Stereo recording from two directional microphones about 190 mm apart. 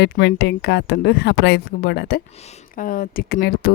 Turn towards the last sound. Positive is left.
turn(degrees=55)  # may be behind; listen again after turning